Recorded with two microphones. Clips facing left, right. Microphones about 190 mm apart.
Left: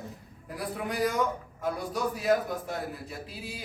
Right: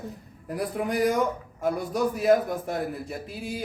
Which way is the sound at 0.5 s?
45° right (ahead or behind).